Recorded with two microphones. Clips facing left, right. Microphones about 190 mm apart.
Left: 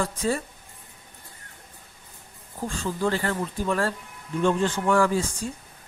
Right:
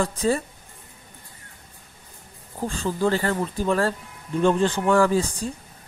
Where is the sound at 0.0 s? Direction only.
30° right (ahead or behind).